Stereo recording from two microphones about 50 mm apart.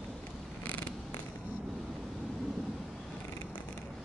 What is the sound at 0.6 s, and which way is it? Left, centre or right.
Mechanisms, left.